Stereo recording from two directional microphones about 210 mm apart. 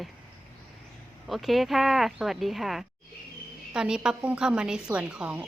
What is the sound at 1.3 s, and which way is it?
Speech, centre (ahead or behind).